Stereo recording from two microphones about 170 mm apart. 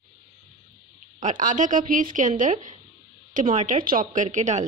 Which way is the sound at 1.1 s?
50° right (ahead or behind).